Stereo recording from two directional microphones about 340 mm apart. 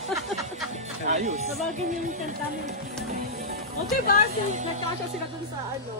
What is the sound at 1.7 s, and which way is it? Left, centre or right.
Speech, right.